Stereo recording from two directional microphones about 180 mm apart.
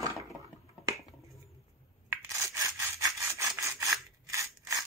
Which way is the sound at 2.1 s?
15° right (ahead or behind).